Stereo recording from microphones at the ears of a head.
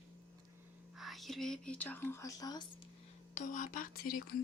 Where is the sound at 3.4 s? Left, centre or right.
Left.